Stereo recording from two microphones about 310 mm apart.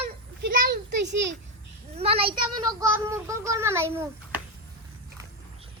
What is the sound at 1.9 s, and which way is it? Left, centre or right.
Child singing, centre.